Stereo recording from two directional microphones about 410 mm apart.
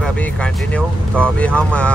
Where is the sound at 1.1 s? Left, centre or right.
Centre.